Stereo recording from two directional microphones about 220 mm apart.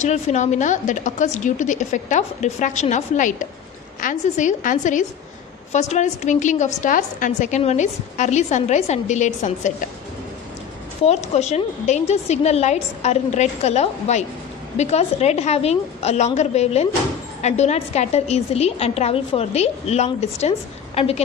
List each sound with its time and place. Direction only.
0.0 s a woman's voice: 30° left (ahead or behind)
11.1 s a woman's voice: 30° left (ahead or behind)